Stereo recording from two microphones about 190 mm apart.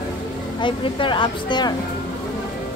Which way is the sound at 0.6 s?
25° left (ahead or behind).